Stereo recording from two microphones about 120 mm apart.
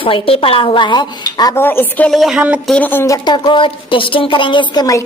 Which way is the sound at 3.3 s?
40° left (ahead or behind).